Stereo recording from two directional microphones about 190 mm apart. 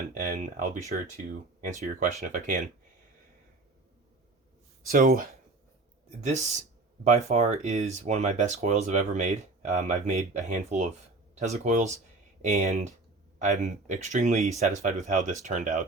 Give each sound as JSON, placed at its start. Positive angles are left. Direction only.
{"t": 0.2, "sound": "speech", "side_deg": -45}
{"t": 4.9, "sound": "speech", "side_deg": -50}
{"t": 6.1, "sound": "speech", "side_deg": -35}